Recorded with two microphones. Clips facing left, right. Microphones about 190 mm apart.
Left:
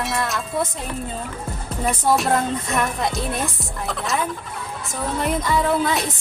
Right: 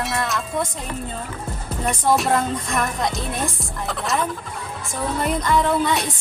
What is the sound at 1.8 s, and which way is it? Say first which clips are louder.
Music: even; centre (ahead or behind).